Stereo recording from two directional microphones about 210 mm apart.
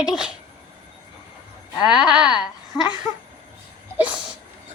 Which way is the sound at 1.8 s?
5° right (ahead or behind).